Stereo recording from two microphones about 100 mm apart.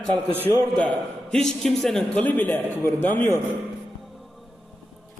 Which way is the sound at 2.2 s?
15° left (ahead or behind).